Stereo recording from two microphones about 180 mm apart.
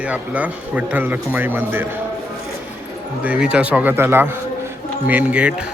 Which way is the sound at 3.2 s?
5° right (ahead or behind).